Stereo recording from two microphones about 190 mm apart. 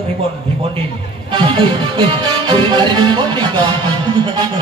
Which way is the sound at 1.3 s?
25° right (ahead or behind).